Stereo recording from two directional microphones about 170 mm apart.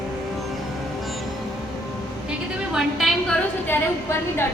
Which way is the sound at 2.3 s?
5° right (ahead or behind).